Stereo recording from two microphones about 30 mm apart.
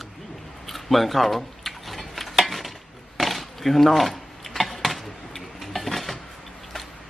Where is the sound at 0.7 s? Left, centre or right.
Centre.